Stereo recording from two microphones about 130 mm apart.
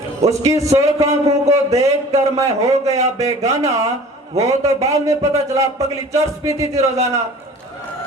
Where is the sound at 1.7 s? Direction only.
25° right (ahead or behind).